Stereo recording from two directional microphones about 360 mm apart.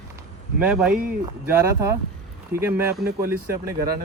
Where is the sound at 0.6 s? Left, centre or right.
Centre.